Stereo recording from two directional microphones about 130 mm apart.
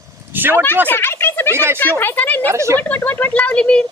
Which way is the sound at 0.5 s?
15° left (ahead or behind).